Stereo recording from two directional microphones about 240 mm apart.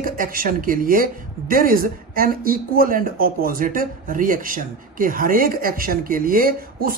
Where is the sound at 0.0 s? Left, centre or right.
Right.